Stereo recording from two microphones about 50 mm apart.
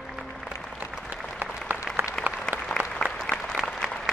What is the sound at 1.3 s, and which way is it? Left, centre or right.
Applause, right.